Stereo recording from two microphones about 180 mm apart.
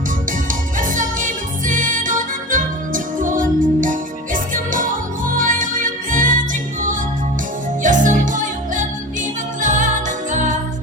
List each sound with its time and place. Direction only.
0.4 s music: 45° right (ahead or behind)